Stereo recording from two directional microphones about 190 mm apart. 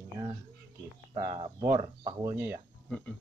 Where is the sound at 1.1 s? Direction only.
25° right (ahead or behind).